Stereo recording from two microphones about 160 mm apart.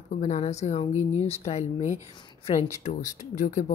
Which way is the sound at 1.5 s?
45° left (ahead or behind).